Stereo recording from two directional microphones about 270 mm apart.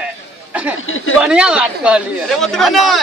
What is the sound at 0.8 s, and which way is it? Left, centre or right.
Speech, left.